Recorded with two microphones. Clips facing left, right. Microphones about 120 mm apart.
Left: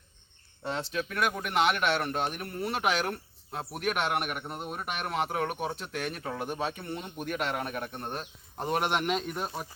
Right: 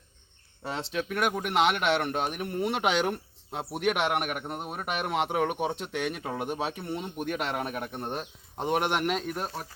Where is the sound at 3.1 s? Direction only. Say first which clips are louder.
Right 3 dB; 15° right (ahead or behind).